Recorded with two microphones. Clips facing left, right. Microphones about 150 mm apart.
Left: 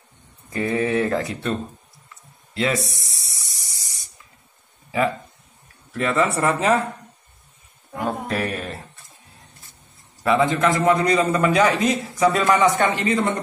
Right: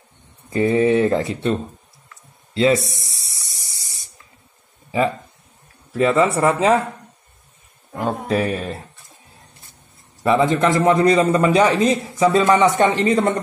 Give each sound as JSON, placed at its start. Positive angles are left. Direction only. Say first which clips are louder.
{"t": 0.5, "sound": "a man's voice", "louder": "right 6 dB", "side_deg": -25}
{"t": 2.5, "sound": "speech", "louder": "right 7 dB", "side_deg": -30}
{"t": 2.9, "sound": "spray", "louder": "right 2 dB", "side_deg": -30}
{"t": 6.1, "sound": "speech", "louder": "right 1 dB", "side_deg": -15}
{"t": 7.9, "sound": "speech", "louder": "right 4 dB", "side_deg": 0}
{"t": 10.3, "sound": "a man's voice", "louder": "right 2 dB", "side_deg": -30}